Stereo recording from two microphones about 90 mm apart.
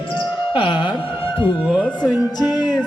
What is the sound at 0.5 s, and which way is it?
Speech, 65° left (ahead or behind).